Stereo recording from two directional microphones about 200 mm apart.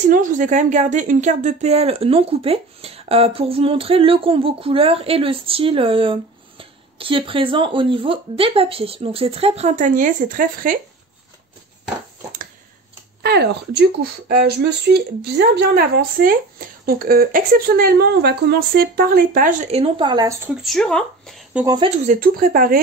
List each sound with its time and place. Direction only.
0.1 s a woman's voice: 40° right (ahead or behind)
13.2 s speech: 55° right (ahead or behind); by 20.3 s 20° right (ahead or behind)
20.4 s speech: centre (ahead or behind)
21.6 s a woman's voice: 25° right (ahead or behind)
22.0 s speech: 40° right (ahead or behind)